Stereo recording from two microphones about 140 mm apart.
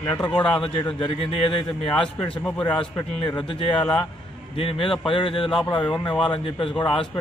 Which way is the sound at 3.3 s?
40° left (ahead or behind).